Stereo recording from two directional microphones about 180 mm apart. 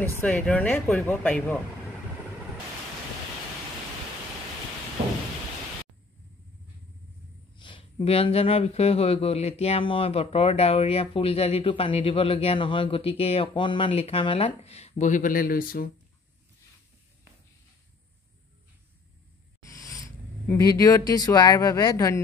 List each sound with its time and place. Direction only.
0.0 s speech: 10° left (ahead or behind)
7.5 s speech: 30° left (ahead or behind); by 15.9 s 55° left (ahead or behind)
19.7 s a sound: 20° left (ahead or behind)
20.5 s speech: 20° left (ahead or behind)